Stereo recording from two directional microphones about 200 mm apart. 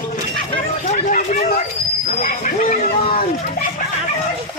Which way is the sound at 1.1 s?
40° left (ahead or behind).